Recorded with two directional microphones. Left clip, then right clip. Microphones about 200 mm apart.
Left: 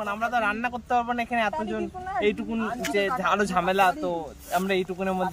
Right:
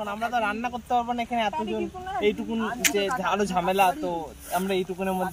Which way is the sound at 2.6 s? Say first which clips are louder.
Right 5 dB; 15° left (ahead or behind).